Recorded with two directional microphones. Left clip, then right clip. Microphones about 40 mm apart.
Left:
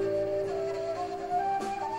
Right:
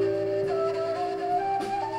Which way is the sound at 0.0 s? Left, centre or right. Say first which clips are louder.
Right 3 dB; left.